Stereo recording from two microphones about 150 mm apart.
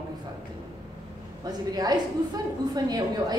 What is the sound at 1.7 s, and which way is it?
A woman's voice, 25° right (ahead or behind).